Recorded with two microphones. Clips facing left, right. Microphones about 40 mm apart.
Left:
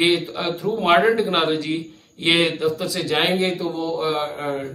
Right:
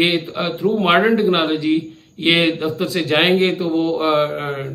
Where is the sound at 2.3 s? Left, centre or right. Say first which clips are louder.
Right 1 dB; right.